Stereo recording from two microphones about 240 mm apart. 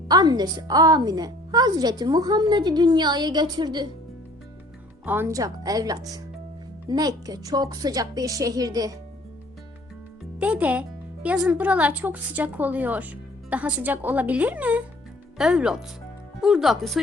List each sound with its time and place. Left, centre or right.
0.1 s speech: centre
5.0 s speech: centre
10.3 s speech: centre